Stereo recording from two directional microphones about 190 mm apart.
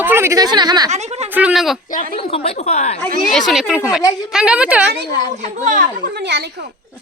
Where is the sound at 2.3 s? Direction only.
30° left (ahead or behind).